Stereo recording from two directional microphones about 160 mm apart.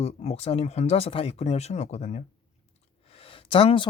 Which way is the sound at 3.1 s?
35° left (ahead or behind).